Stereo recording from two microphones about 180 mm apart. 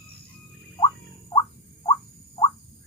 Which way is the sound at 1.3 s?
25° left (ahead or behind).